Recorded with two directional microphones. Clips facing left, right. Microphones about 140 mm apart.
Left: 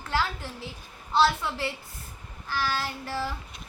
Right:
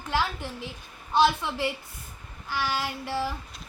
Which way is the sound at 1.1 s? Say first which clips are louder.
Right 1 dB; 15° right (ahead or behind).